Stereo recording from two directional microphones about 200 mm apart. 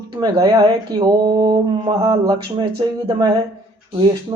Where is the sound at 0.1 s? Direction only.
20° right (ahead or behind).